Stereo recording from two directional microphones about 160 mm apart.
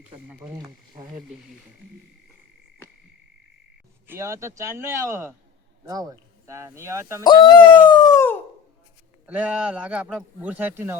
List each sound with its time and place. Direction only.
0.3 s speech: 15° right (ahead or behind)
0.6 s speech: 25° right (ahead or behind)
4.0 s speech: 15° right (ahead or behind)
7.3 s speech: 30° left (ahead or behind)
9.2 s speech: 10° right (ahead or behind)